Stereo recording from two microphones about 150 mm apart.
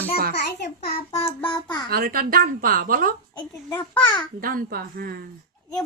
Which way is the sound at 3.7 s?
10° left (ahead or behind).